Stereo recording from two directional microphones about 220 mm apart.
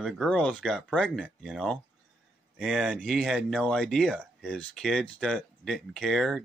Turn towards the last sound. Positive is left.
turn(degrees=0)  # may be behind; listen again after turning